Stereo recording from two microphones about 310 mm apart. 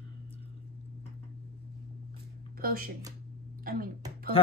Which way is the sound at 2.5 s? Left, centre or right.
Right.